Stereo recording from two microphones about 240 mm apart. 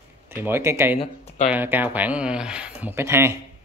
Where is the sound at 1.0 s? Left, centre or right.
Left.